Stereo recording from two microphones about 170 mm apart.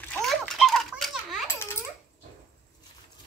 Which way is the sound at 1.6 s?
15° left (ahead or behind).